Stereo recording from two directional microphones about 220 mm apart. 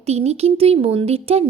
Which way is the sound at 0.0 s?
30° right (ahead or behind).